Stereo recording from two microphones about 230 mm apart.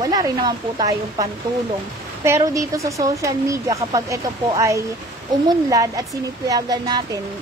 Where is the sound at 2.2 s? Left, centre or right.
Centre.